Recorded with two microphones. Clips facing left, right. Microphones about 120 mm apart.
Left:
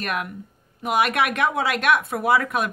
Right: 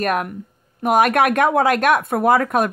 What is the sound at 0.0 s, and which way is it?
A woman's voice, 45° right (ahead or behind).